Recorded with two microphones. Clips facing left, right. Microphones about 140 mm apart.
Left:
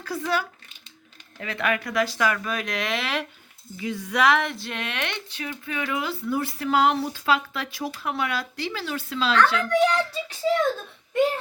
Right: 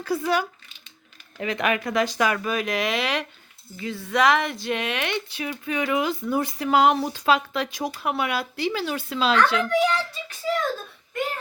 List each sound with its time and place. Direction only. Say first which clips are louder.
0.0 s speech: right 3 dB; 10° right (ahead or behind)
2.4 s speech: right 4 dB; 5° right (ahead or behind)
3.8 s speech: right 1 dB; 15° left (ahead or behind)
4.2 s speech: right 1 dB; centre (ahead or behind)